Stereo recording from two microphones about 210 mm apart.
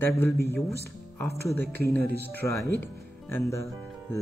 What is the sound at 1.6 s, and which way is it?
Speech, 50° right (ahead or behind).